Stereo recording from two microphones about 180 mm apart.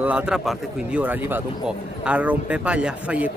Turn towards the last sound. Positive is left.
turn(degrees=-5)  # may be behind; listen again after turning